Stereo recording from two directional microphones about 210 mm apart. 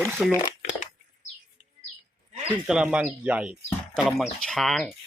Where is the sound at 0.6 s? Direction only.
35° left (ahead or behind).